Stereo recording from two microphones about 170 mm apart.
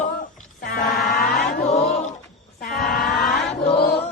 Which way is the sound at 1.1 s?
60° left (ahead or behind).